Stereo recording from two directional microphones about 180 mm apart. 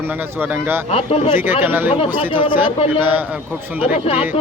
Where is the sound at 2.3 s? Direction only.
30° left (ahead or behind).